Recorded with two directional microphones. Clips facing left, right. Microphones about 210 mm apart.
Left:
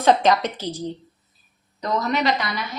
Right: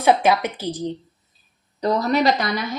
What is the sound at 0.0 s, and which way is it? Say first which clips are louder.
Speech: even; 10° right (ahead or behind).